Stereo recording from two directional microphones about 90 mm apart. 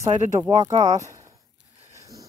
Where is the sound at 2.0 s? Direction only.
40° right (ahead or behind).